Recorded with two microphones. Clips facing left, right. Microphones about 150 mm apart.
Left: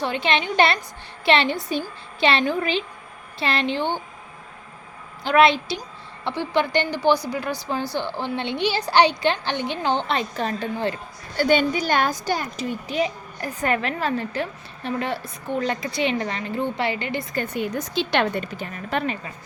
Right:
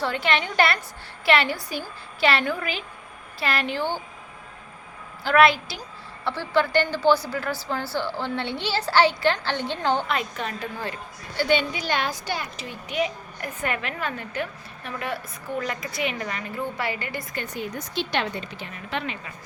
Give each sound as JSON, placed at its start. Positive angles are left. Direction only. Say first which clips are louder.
{"t": 0.0, "sound": "a woman's voice", "louder": "left 2 dB", "side_deg": 20}
{"t": 5.2, "sound": "a woman's voice", "louder": "left 1 dB", "side_deg": 20}
{"t": 11.3, "sound": "a woman's voice", "louder": "left 4 dB", "side_deg": 45}
{"t": 17.3, "sound": "speech", "louder": "left 7 dB", "side_deg": 60}